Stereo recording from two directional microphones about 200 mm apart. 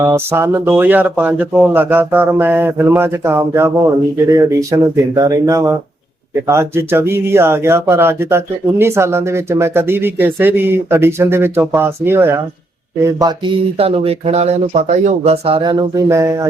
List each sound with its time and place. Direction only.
0.0 s speech: 10° right (ahead or behind)